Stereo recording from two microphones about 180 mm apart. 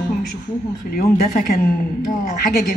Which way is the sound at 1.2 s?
55° left (ahead or behind).